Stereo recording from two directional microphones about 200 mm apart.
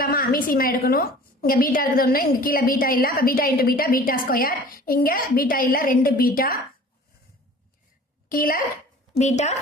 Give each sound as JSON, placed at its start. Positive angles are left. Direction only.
{"t": 0.0, "sound": "a woman's voice", "side_deg": 45}
{"t": 8.3, "sound": "a woman's voice", "side_deg": 45}